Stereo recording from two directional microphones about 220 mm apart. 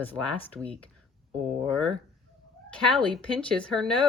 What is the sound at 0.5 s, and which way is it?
Speech, 5° left (ahead or behind).